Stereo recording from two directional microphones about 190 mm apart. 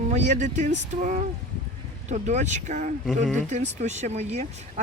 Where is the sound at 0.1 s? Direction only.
40° right (ahead or behind).